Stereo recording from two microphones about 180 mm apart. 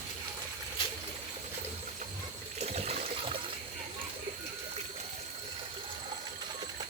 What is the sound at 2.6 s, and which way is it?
Water, 35° right (ahead or behind).